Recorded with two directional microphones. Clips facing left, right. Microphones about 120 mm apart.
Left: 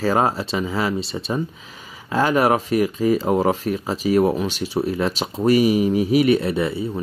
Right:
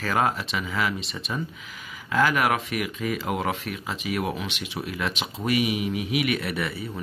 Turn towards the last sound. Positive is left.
turn(degrees=25)  # may be behind; listen again after turning